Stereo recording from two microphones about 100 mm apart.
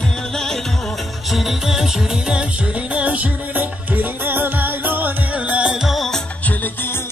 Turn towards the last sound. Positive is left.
turn(degrees=20)  # may be behind; listen again after turning